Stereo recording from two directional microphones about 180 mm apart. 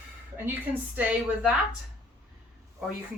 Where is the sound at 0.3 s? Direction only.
10° right (ahead or behind).